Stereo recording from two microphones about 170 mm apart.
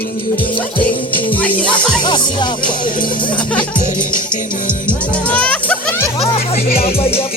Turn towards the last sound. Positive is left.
turn(degrees=35)  # may be behind; listen again after turning